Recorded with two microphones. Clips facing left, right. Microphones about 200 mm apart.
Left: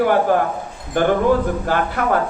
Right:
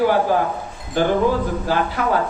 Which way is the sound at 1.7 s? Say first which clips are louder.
Even; 55° left (ahead or behind).